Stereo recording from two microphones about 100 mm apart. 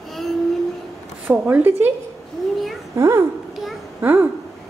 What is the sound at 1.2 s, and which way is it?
Speech, 15° right (ahead or behind).